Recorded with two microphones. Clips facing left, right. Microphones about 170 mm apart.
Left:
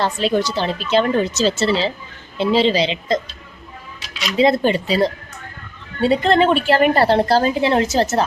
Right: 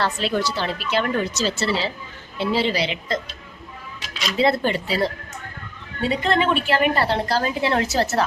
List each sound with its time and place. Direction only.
0.0 s a woman's voice: 20° left (ahead or behind)
4.4 s a woman's voice: 15° left (ahead or behind)
6.0 s a woman's voice: 30° left (ahead or behind)